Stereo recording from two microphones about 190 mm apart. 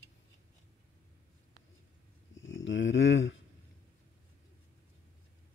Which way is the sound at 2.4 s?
80° left.